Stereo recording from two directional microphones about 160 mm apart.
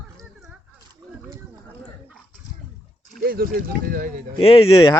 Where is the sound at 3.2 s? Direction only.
70° right (ahead or behind).